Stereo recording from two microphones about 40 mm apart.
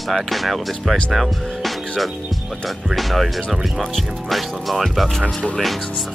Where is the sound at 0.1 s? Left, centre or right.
Centre.